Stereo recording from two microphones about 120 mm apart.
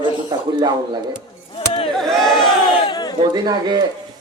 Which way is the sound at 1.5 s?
50° left (ahead or behind).